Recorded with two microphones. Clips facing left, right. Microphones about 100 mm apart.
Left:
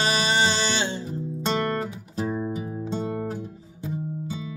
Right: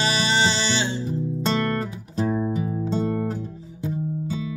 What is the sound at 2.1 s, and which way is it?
Music, 5° left (ahead or behind).